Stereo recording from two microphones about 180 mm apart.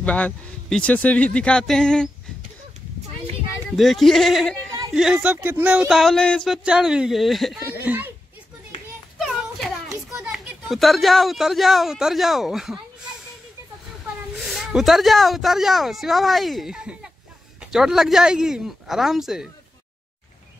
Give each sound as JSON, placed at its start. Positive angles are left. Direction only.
{"t": 0.0, "sound": "speech", "side_deg": 5}
{"t": 3.7, "sound": "speech", "side_deg": 0}
{"t": 9.8, "sound": "children playing", "side_deg": -15}
{"t": 10.2, "sound": "speech", "side_deg": 0}
{"t": 14.4, "sound": "speech", "side_deg": 0}